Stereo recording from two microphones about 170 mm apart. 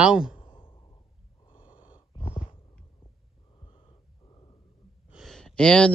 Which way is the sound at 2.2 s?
35° left (ahead or behind).